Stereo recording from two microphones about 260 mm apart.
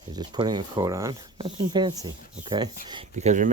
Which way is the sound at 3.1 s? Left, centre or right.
Right.